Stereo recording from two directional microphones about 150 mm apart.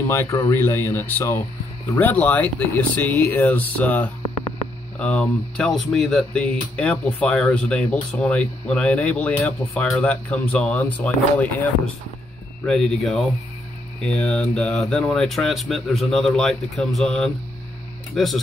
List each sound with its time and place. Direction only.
0.0 s speech: 15° left (ahead or behind); by 18.4 s centre (ahead or behind)